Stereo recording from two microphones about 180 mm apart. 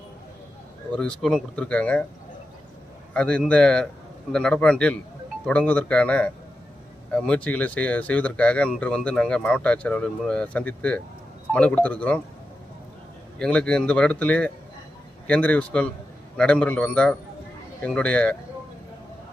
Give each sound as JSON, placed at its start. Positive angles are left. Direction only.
{"t": 0.9, "sound": "speech", "side_deg": 5}
{"t": 3.1, "sound": "speech", "side_deg": 5}
{"t": 13.4, "sound": "speech", "side_deg": 5}